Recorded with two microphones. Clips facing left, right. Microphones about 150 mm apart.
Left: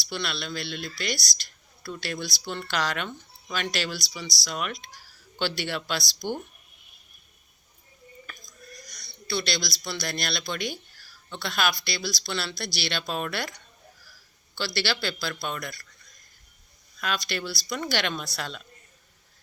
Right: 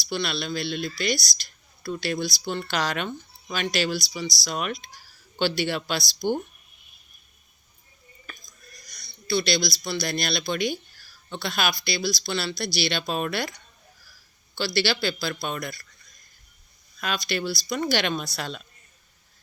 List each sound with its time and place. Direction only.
0.0 s speech: 15° right (ahead or behind)
8.9 s a sound: 10° right (ahead or behind)
9.8 s speech: 10° right (ahead or behind)
14.6 s speech: 10° right (ahead or behind)
17.0 s speech: 15° right (ahead or behind)